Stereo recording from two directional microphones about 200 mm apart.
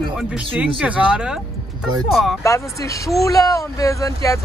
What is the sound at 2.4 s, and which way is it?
Speech, 15° left (ahead or behind).